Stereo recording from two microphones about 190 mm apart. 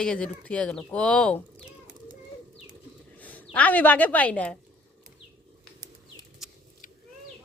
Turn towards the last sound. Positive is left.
turn(degrees=0)  # may be behind; listen again after turning